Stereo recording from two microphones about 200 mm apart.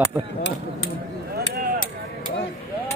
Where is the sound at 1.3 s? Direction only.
50° right (ahead or behind).